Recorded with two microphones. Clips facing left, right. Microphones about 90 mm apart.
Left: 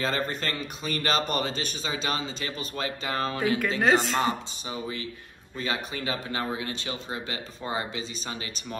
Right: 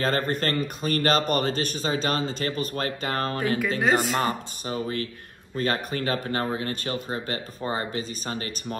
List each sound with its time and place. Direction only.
0.0 s speech: 50° right (ahead or behind)
3.8 s speech: 5° right (ahead or behind)
4.2 s speech: 50° right (ahead or behind)